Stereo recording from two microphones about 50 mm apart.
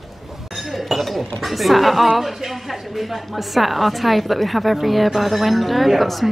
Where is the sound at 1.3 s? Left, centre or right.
Centre.